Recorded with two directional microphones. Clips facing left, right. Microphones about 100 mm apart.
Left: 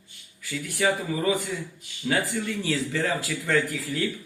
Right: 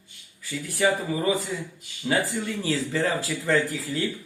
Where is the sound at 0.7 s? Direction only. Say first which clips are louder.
Right 2 dB; 35° right (ahead or behind).